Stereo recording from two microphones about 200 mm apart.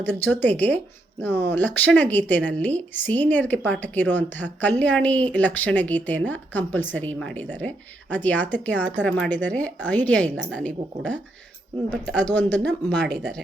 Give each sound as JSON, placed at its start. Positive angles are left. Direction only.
{"t": 0.0, "sound": "speech", "side_deg": 10}
{"t": 12.2, "sound": "speech", "side_deg": 10}
{"t": 13.0, "sound": "speech", "side_deg": -55}